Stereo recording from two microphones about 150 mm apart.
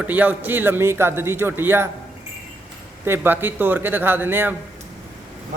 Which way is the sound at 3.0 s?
15° right (ahead or behind).